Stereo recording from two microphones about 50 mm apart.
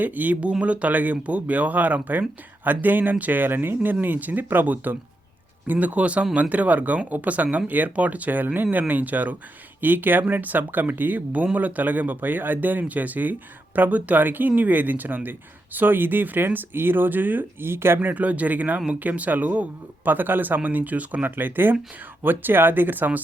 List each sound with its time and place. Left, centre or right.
0.0 s speech: right
17.7 s speech: right
18.0 s speech: right